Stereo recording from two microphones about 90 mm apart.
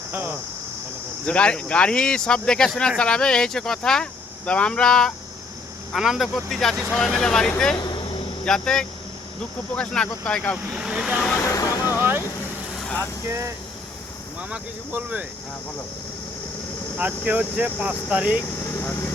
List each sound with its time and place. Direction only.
0.1 s speech: 25° right (ahead or behind)
1.2 s speech: 15° left (ahead or behind)
7.9 s vehicle: 65° left (ahead or behind)
8.4 s speech: 5° left (ahead or behind)
10.7 s speech: 10° right (ahead or behind)
11.3 s vehicle: 35° left (ahead or behind)
11.9 s vehicle: 25° right (ahead or behind)
13.2 s speech: 35° right (ahead or behind)
14.5 s speech: 15° right (ahead or behind)
17.0 s speech: 15° right (ahead or behind)
18.6 s vehicle: 30° left (ahead or behind)